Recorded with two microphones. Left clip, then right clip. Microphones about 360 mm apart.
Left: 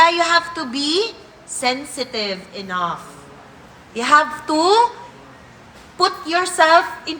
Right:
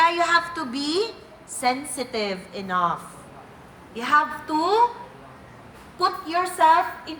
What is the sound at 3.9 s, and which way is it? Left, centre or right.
Speech, centre.